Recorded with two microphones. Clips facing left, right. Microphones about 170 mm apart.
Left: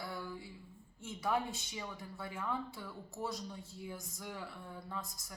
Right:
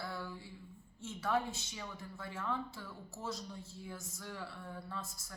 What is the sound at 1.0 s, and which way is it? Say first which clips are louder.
A woman's voice: even; 15° left (ahead or behind).